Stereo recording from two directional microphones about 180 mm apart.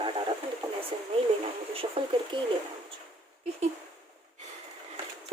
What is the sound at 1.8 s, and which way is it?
Speech, 25° right (ahead or behind).